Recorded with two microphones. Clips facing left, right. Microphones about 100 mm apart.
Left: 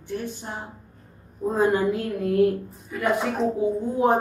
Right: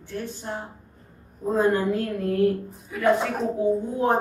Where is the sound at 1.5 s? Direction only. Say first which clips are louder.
Even; 15° left (ahead or behind).